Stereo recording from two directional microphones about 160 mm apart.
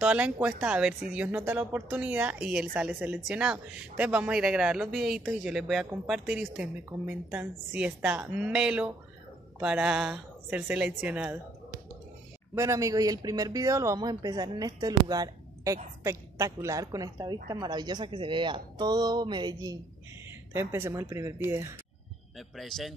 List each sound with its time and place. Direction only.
0.0 s a woman's voice: 10° right (ahead or behind)
12.5 s speech: 20° right (ahead or behind)
20.5 s speech: 15° right (ahead or behind)
22.6 s a woman's voice: centre (ahead or behind)